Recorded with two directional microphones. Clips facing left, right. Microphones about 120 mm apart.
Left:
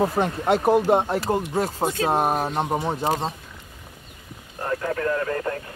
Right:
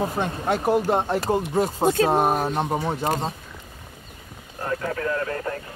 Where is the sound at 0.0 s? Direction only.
30° left (ahead or behind).